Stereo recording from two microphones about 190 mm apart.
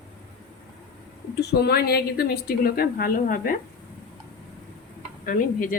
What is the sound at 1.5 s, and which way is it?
A woman's voice, 60° left (ahead or behind).